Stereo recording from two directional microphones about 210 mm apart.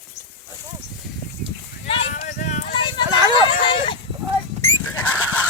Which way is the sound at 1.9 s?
30° left (ahead or behind).